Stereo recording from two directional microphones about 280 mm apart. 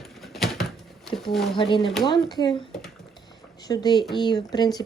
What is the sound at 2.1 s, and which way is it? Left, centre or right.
Speech, centre.